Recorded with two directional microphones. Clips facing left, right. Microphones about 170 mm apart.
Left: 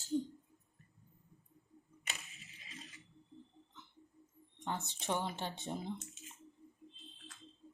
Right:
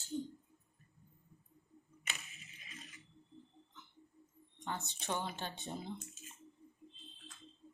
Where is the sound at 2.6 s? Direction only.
25° left (ahead or behind).